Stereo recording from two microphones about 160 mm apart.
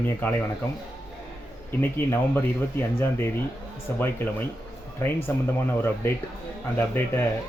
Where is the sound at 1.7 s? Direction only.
15° left (ahead or behind).